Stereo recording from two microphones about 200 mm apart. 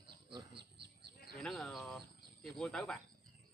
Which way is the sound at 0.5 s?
55° right (ahead or behind).